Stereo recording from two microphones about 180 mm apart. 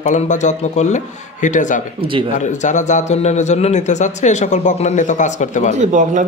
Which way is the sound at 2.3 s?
40° left (ahead or behind).